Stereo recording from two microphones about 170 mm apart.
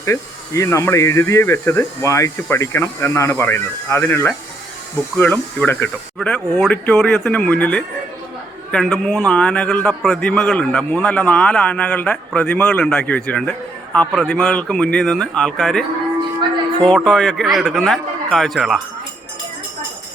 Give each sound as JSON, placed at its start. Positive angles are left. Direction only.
{"t": 0.0, "sound": "a man's voice", "side_deg": 20}
{"t": 16.8, "sound": "a man's voice", "side_deg": 5}